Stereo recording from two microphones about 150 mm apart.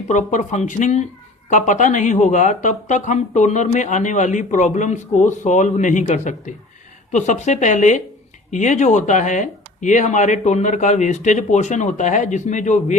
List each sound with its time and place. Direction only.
0.1 s speech: 55° left (ahead or behind)